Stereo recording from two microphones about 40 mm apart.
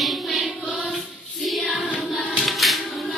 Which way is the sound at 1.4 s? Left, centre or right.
Centre.